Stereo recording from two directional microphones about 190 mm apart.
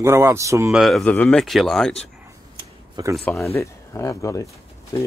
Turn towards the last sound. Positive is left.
turn(degrees=20)  # may be behind; listen again after turning